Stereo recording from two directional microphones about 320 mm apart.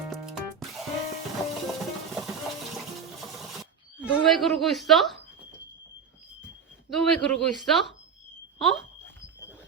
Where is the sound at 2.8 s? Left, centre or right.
Centre.